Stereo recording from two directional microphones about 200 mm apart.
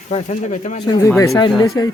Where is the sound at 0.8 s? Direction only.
20° left (ahead or behind).